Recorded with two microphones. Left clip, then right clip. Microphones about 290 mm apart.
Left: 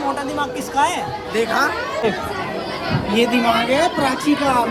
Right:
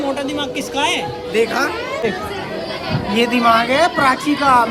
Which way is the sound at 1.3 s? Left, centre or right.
Centre.